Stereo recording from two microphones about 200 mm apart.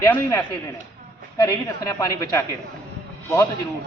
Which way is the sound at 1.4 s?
15° left (ahead or behind).